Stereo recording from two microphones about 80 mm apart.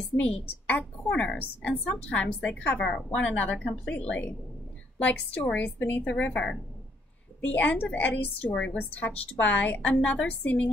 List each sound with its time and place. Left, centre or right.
0.2 s a woman's voice: centre